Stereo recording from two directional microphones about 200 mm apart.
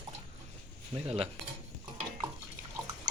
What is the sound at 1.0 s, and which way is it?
Speech, 30° right (ahead or behind).